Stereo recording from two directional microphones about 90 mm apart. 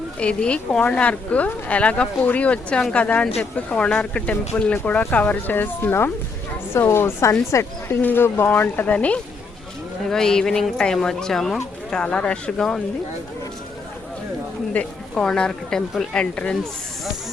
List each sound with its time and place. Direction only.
0.2 s speech: 10° left (ahead or behind)
14.7 s speech: 15° left (ahead or behind)